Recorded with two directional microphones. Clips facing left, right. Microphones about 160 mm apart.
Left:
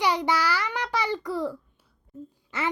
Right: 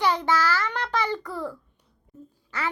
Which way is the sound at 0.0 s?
15° left (ahead or behind).